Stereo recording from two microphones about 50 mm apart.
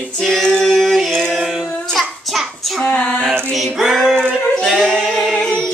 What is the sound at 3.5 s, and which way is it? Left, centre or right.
Music, centre.